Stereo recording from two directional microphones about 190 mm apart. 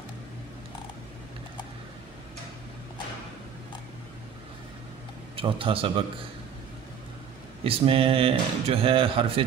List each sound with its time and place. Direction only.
5.3 s speech: 30° right (ahead or behind)
7.6 s speech: 30° right (ahead or behind)